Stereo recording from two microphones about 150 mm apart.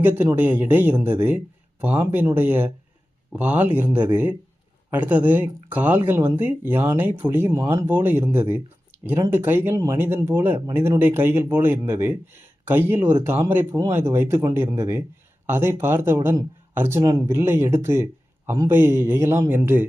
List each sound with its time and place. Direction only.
0.0 s speech: 15° right (ahead or behind)